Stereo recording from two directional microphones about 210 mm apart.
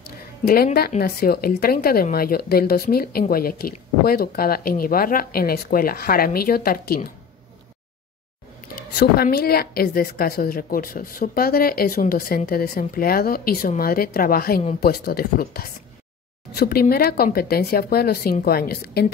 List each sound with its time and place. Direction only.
1.0 s speech: 45° left (ahead or behind)
8.9 s speech: 50° left (ahead or behind)